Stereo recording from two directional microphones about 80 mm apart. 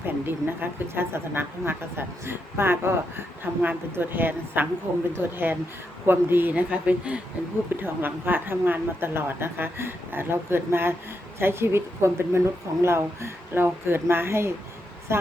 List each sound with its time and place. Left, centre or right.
0.0 s a woman's voice: right
6.5 s a woman's voice: centre